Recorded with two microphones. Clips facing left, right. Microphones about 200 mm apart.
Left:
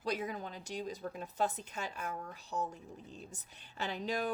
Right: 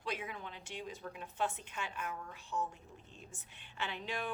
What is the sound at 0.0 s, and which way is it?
A woman's voice, 40° left (ahead or behind).